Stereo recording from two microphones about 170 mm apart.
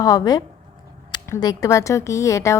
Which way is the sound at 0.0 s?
20° left (ahead or behind).